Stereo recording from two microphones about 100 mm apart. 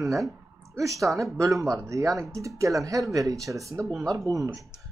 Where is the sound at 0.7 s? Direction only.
30° right (ahead or behind).